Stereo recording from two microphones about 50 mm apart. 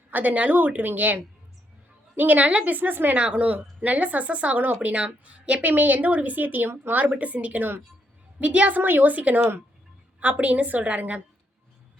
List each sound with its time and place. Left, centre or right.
0.1 s a woman's voice: right
2.7 s a woman's voice: right
3.2 s a woman's voice: right
8.8 s a woman's voice: right